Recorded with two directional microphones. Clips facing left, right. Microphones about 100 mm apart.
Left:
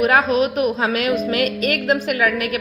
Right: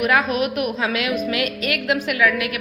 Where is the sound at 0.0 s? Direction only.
35° left (ahead or behind).